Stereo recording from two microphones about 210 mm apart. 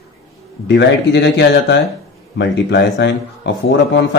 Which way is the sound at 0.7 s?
55° left (ahead or behind).